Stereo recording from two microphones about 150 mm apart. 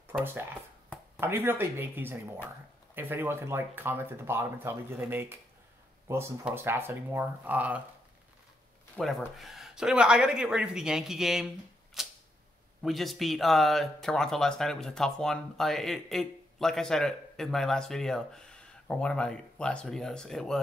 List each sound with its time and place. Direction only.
0.2 s speech: 15° right (ahead or behind)
8.9 s speech: centre (ahead or behind)
12.0 s camera: 5° right (ahead or behind)
12.8 s speech: centre (ahead or behind)